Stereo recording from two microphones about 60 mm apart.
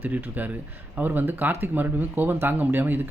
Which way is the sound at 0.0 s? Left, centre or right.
Right.